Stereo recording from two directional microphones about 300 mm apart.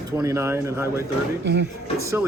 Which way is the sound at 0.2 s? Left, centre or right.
Centre.